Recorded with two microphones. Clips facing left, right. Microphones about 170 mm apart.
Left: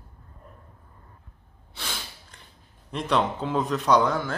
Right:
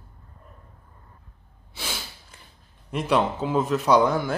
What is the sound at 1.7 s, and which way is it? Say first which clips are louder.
Snort: right 2 dB; 5° right (ahead or behind).